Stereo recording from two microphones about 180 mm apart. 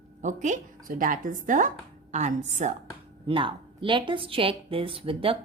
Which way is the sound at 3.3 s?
30° right (ahead or behind).